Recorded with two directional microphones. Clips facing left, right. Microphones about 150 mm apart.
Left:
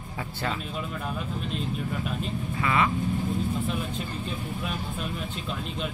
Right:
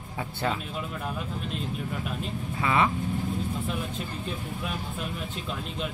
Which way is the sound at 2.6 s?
20° right (ahead or behind).